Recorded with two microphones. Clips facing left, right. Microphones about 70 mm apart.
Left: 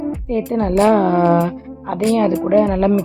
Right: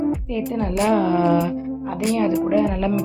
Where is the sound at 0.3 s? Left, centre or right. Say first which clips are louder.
Left 5 dB; left.